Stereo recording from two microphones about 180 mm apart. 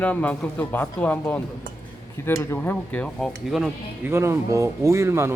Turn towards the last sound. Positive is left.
turn(degrees=-15)  # may be behind; listen again after turning